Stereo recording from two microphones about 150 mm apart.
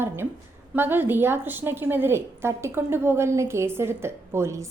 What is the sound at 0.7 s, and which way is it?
A woman's voice, 15° right (ahead or behind).